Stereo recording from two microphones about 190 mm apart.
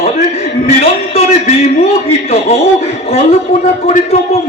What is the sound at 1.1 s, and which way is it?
A man's voice, 35° left (ahead or behind).